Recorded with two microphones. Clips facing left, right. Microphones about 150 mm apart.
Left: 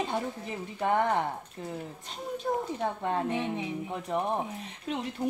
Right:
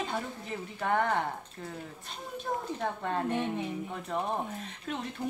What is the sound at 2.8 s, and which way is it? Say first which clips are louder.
Speech: left 1 dB; 15° left (ahead or behind).